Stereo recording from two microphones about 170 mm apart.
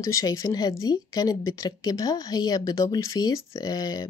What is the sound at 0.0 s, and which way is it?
Speech, 20° left (ahead or behind).